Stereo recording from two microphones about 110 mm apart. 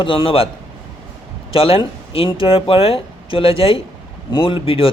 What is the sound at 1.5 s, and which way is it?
Speech, 55° left (ahead or behind).